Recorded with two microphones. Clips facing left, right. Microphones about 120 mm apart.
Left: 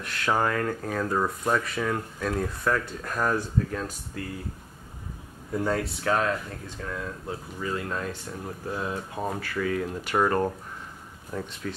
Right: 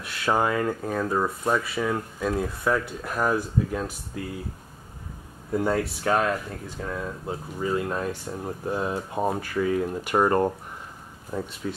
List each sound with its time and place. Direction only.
0.0 s speech: 5° right (ahead or behind)
5.5 s speech: 5° right (ahead or behind); by 11.5 s 20° right (ahead or behind)